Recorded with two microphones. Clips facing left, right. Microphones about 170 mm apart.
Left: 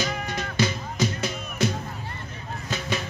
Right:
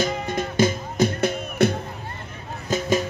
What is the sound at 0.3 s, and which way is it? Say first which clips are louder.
Music: right 6 dB; 50° right (ahead or behind).